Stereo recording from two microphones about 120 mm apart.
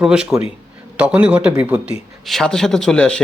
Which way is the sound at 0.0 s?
5° right (ahead or behind).